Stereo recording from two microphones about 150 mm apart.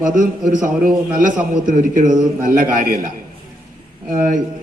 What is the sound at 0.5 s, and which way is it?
A man's voice, 60° right (ahead or behind).